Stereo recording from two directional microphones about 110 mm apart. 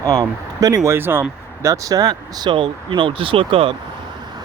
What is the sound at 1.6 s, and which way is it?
Speech, 30° right (ahead or behind).